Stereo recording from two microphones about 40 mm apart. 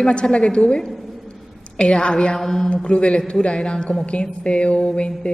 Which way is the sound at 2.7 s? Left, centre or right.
Left.